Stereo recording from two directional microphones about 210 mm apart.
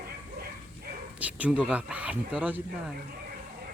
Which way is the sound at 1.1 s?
5° right (ahead or behind).